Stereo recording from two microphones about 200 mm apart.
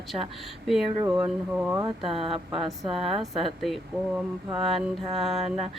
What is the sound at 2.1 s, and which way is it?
Speech, 30° right (ahead or behind).